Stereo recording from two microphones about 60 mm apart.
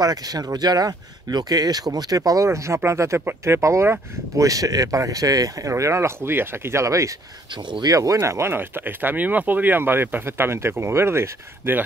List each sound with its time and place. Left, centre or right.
0.0 s speech: right
4.4 s speech: right
7.9 s speech: right
8.2 s speech: right